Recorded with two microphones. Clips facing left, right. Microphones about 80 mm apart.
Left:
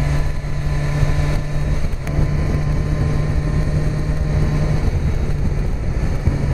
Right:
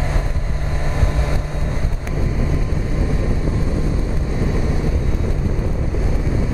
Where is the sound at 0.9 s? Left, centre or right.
Right.